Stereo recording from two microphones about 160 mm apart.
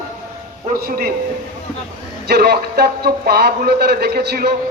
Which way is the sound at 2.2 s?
80° right.